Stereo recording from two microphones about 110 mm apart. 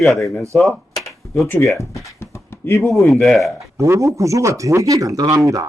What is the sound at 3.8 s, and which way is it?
Speech, 30° right (ahead or behind).